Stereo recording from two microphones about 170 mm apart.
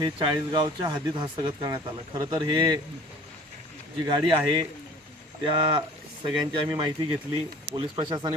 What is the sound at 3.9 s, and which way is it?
Speech, 25° right (ahead or behind).